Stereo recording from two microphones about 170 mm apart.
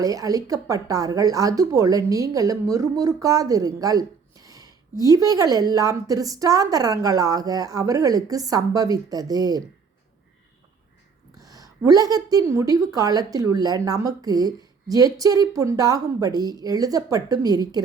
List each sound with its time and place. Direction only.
0.0 s speech: 20° right (ahead or behind)
11.3 s speech: 20° right (ahead or behind)